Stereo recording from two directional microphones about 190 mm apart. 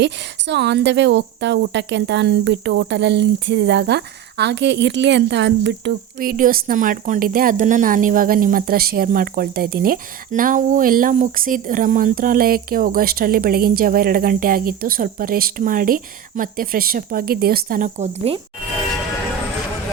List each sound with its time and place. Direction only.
0.0 s speech: 65° right (ahead or behind); by 18.3 s 35° right (ahead or behind)